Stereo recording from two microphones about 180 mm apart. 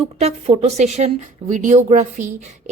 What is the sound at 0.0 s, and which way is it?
A woman's voice, 35° right (ahead or behind).